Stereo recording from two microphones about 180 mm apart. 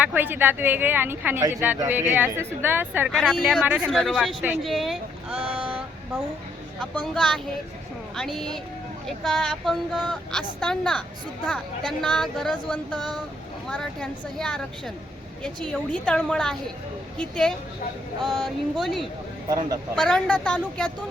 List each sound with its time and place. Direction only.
0.0 s speech: 10° right (ahead or behind)
3.1 s speech: centre (ahead or behind)
6.9 s speech: 5° left (ahead or behind)
19.5 s speech: 20° right (ahead or behind)
20.0 s speech: 5° left (ahead or behind)